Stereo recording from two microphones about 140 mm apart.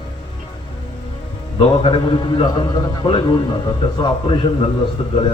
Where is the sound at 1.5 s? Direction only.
40° left (ahead or behind).